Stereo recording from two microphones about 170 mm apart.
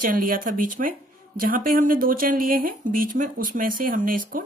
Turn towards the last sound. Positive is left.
turn(degrees=-55)  # may be behind; listen again after turning